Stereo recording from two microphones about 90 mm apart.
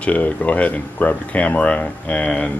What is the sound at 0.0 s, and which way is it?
Speech, 15° left (ahead or behind).